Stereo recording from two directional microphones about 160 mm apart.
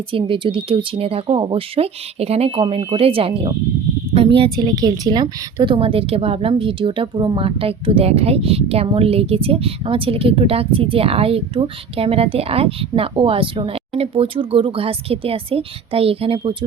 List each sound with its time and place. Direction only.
0.1 s a woman's voice: 35° right (ahead or behind)